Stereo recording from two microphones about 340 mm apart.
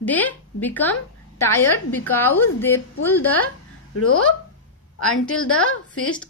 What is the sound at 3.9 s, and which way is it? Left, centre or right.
A woman's voice, left.